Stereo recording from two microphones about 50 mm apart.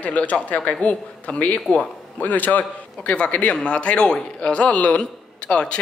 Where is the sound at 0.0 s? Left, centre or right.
Left.